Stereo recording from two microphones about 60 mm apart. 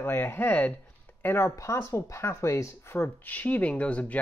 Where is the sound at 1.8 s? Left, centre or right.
Left.